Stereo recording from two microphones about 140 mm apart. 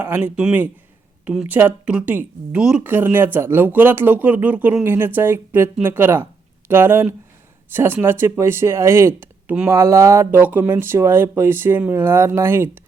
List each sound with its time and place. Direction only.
0.0 s speech: 10° right (ahead or behind)